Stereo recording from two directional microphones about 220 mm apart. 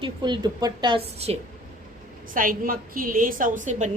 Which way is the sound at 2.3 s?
40° right (ahead or behind).